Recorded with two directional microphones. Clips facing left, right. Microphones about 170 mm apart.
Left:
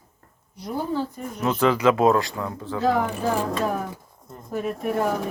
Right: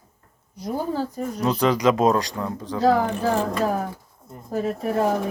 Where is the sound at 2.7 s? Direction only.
35° right (ahead or behind).